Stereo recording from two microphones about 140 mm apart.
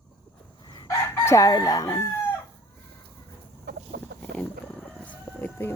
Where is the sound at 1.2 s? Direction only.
20° left (ahead or behind).